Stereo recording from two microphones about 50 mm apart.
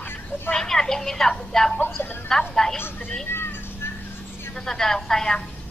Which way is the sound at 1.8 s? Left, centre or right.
Left.